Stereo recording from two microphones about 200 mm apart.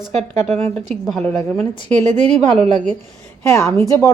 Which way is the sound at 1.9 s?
35° right (ahead or behind).